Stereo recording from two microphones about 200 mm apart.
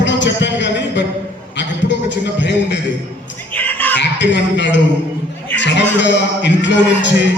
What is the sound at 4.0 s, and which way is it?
A man's voice, 60° left (ahead or behind).